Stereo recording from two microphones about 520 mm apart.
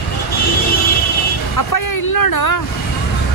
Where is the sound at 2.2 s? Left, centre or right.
Left.